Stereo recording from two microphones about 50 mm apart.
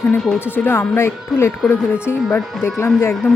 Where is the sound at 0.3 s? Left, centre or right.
Left.